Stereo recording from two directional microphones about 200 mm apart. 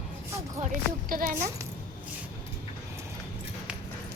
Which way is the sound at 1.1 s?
45° right (ahead or behind).